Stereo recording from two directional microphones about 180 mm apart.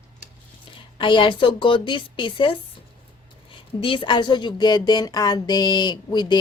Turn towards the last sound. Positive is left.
turn(degrees=25)  # may be behind; listen again after turning